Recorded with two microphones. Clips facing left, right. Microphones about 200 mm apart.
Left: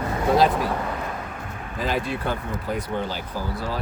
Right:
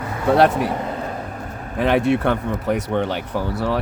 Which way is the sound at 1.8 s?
65° right (ahead or behind).